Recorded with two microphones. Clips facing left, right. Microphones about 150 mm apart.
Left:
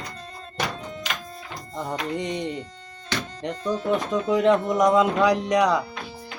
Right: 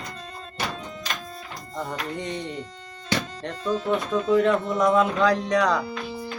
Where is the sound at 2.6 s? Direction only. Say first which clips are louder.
Right 4 dB; 90° right.